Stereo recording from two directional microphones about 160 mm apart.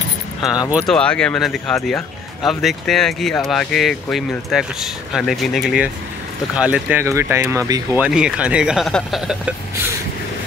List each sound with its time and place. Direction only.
0.4 s speech: centre (ahead or behind); by 8.0 s 20° right (ahead or behind)
8.0 s speech: 5° right (ahead or behind)